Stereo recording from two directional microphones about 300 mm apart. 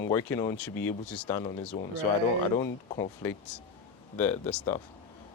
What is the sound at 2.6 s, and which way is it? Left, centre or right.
Speech, centre.